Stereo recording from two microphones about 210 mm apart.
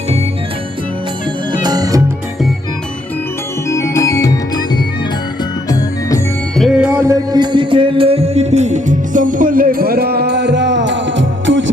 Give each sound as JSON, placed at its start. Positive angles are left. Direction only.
{"t": 1.5, "sound": "music", "side_deg": -20}
{"t": 3.7, "sound": "music", "side_deg": 15}
{"t": 6.6, "sound": "music", "side_deg": -5}
{"t": 7.0, "sound": "music", "side_deg": -20}